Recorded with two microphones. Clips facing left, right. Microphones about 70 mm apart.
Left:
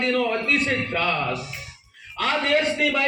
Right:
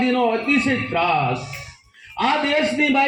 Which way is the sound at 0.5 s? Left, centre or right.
Right.